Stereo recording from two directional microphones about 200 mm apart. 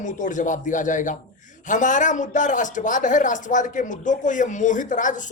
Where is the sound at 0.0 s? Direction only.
40° left (ahead or behind).